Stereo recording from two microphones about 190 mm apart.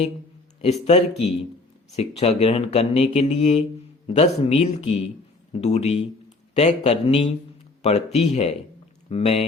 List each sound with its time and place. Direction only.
0.6 s speech: 35° left (ahead or behind)